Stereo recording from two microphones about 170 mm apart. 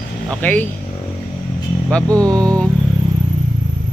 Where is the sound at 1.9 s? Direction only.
5° left (ahead or behind).